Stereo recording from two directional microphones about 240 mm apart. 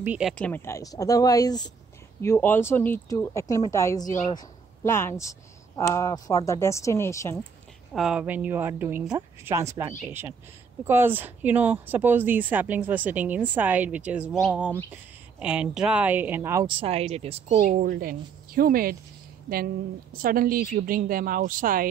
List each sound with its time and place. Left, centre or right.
0.0 s speech: centre
7.9 s a woman's voice: centre; by 17.6 s right
17.6 s speech: right